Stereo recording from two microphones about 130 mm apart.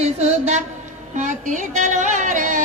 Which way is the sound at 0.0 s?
55° right (ahead or behind).